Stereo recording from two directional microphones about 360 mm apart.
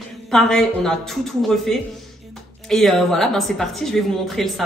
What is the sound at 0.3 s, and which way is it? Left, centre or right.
A woman's voice, centre.